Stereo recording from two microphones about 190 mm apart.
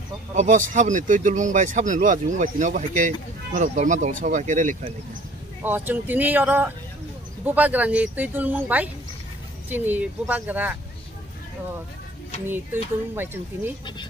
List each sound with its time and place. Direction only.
0.4 s speech: 40° right (ahead or behind)
5.6 s speech: 10° right (ahead or behind)
12.4 s speech: 10° right (ahead or behind)